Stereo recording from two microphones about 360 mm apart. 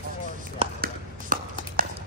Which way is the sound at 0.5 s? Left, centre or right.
Right.